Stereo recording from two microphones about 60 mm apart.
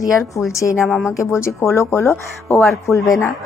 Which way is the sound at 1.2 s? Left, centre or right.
Left.